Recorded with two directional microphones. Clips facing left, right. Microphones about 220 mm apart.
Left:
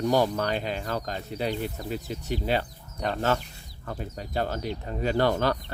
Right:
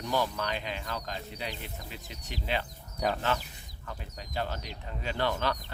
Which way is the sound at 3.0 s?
5° right (ahead or behind).